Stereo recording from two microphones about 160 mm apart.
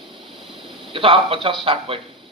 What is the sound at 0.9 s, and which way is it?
Speech, 35° right (ahead or behind).